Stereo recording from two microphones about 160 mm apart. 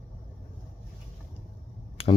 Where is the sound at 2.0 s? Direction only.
35° left (ahead or behind).